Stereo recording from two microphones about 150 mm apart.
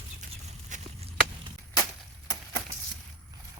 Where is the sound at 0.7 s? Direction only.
55° right (ahead or behind).